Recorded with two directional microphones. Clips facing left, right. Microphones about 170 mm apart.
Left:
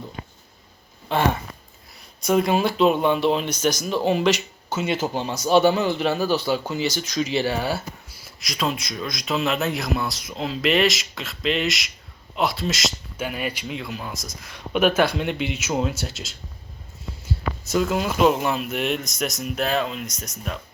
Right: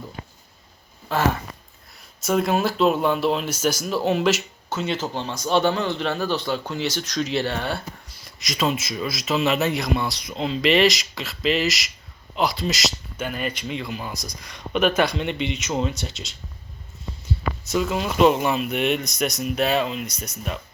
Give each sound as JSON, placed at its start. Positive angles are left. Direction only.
{"t": 2.2, "sound": "a man's voice", "side_deg": 0}
{"t": 4.8, "sound": "a man's voice", "side_deg": 10}